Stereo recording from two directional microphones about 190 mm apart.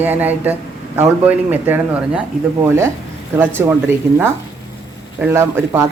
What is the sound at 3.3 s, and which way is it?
Speech, 10° right (ahead or behind).